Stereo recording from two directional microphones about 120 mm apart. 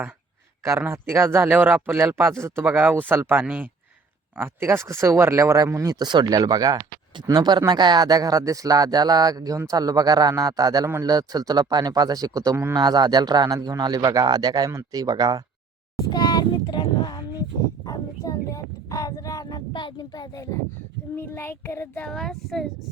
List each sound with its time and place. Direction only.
0.6 s a man's voice: 20° right (ahead or behind)
16.0 s speech: 30° left (ahead or behind)
17.8 s a sound: 30° left (ahead or behind)
21.2 s child singing: 20° left (ahead or behind); by 22.6 s centre (ahead or behind)